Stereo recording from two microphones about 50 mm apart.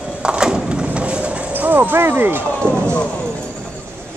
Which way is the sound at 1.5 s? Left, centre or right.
Right.